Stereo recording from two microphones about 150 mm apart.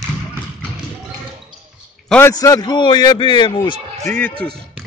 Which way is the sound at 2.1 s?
15° left (ahead or behind).